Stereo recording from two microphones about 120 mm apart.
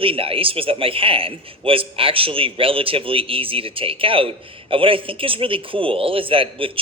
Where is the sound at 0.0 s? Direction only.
50° right (ahead or behind).